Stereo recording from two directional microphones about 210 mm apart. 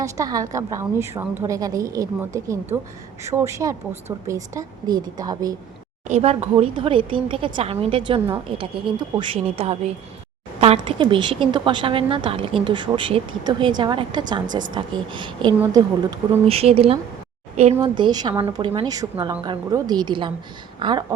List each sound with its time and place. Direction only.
0.0 s a woman's voice: 15° right (ahead or behind)
6.1 s a woman's voice: 30° right (ahead or behind)